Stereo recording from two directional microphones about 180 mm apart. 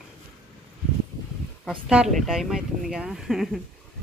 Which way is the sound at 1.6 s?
5° right (ahead or behind).